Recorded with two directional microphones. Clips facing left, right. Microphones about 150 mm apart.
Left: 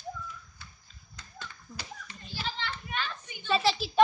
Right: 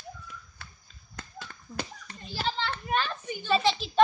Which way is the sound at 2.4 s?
35° right (ahead or behind).